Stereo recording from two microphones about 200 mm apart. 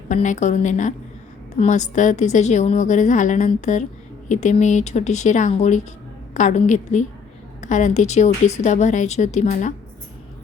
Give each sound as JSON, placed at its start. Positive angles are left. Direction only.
{"t": 0.1, "sound": "a woman's voice", "side_deg": 35}